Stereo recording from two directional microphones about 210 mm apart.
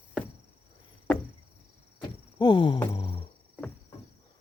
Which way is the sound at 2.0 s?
20° left (ahead or behind).